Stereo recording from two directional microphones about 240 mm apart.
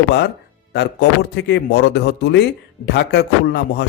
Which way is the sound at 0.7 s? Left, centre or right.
Left.